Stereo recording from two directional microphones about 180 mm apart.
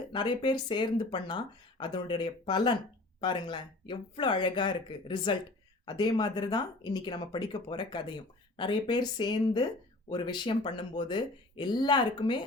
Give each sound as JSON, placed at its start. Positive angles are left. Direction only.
{"t": 0.1, "sound": "speech", "side_deg": 25}